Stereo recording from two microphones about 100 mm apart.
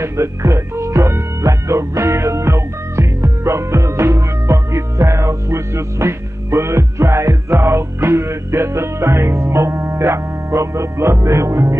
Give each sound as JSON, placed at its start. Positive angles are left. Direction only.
{"t": 0.0, "sound": "speech", "side_deg": -30}